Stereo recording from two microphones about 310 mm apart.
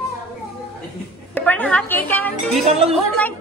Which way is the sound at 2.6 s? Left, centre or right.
Centre.